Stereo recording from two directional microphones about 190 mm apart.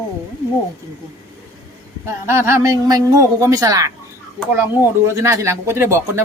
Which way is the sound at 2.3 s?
15° right (ahead or behind).